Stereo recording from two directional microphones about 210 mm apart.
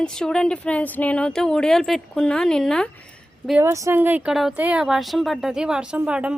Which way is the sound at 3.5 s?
10° right (ahead or behind).